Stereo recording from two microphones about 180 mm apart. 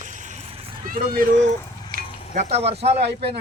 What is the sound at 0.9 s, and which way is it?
Speech, 50° right (ahead or behind).